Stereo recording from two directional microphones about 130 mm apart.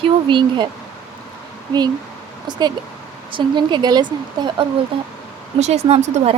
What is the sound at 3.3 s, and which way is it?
Speech, 40° right (ahead or behind).